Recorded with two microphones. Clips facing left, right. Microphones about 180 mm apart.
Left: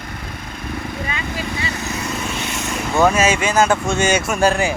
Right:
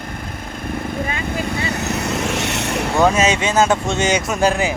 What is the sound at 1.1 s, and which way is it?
Vehicle, 50° right (ahead or behind).